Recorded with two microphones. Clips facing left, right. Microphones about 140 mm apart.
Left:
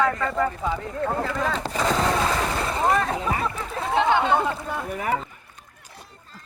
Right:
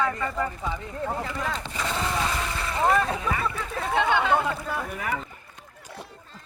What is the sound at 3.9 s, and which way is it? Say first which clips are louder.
Speech: left 3 dB; 20° left (ahead or behind).